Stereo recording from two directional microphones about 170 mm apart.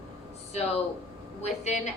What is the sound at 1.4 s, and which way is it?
Speech, 40° left (ahead or behind).